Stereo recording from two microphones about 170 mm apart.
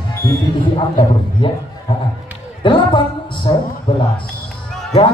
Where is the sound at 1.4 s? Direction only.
30° left (ahead or behind).